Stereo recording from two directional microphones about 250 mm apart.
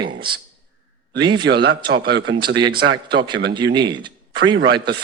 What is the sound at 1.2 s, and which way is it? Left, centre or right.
Speech, centre.